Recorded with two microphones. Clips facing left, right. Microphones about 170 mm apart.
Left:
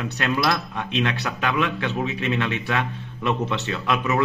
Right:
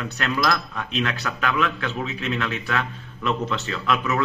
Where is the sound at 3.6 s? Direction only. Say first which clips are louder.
Even; 20° left (ahead or behind).